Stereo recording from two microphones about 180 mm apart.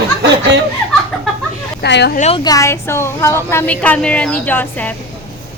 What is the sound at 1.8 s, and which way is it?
Speech, 70° left (ahead or behind).